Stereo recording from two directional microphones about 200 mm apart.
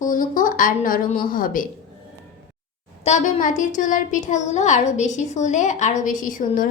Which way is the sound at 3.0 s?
40° left (ahead or behind).